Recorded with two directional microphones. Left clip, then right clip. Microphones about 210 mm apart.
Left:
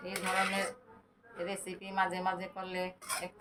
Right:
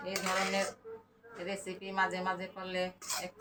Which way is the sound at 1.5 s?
30° left (ahead or behind).